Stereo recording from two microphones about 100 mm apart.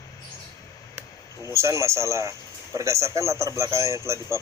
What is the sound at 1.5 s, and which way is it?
A man's voice, 30° right (ahead or behind).